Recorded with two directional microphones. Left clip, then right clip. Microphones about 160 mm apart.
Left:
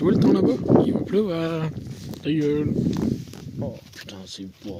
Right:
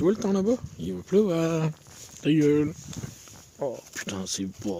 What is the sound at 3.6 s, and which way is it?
Speech, 45° right (ahead or behind).